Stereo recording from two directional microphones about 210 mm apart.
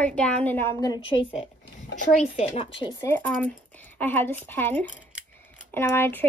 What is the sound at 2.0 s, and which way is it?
Speech, 35° left (ahead or behind).